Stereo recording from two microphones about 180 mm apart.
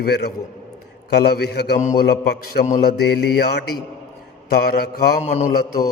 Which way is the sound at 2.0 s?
65° left (ahead or behind).